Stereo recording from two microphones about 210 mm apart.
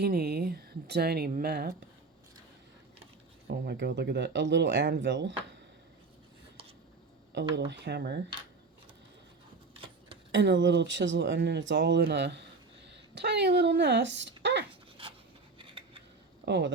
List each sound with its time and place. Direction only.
0.0 s speech: 50° right (ahead or behind)
3.4 s speech: 50° right (ahead or behind)
7.5 s speech: 55° right (ahead or behind)
10.3 s speech: 60° right (ahead or behind)
14.7 s dog: 25° right (ahead or behind)
15.5 s a sound: 25° right (ahead or behind)
16.5 s speech: 55° right (ahead or behind)